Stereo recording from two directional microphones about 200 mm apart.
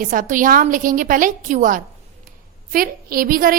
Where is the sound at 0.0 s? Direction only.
40° right (ahead or behind).